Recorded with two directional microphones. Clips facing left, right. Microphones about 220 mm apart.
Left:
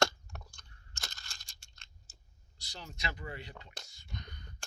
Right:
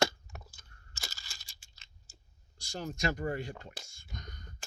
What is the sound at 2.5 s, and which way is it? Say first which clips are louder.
Speech: right 10 dB; 45° right (ahead or behind).